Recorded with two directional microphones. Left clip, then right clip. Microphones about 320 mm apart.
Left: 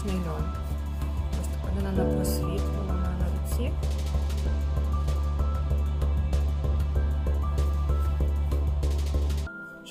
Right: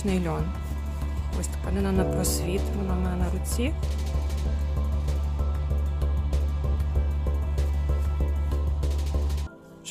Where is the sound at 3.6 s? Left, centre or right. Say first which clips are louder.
Right 6 dB; right.